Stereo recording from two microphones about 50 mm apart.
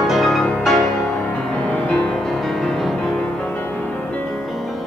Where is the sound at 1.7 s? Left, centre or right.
Left.